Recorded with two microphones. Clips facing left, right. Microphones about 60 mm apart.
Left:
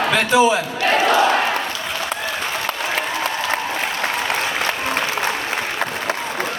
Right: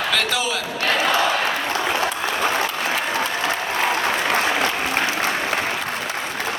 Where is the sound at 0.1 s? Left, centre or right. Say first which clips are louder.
Left 10 dB; left.